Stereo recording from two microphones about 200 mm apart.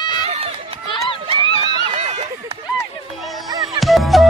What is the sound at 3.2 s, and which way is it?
Music, centre (ahead or behind).